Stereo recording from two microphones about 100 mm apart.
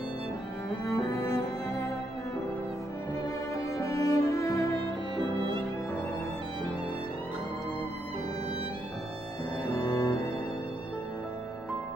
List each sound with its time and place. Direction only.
0.8 s cello: 30° left (ahead or behind)
3.7 s music: 30° left (ahead or behind)
9.7 s music: 30° left (ahead or behind)